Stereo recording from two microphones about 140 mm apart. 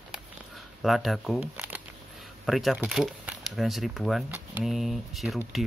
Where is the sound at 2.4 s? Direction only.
Centre (ahead or behind).